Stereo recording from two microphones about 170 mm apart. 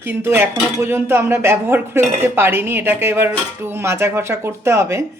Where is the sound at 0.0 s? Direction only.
15° right (ahead or behind).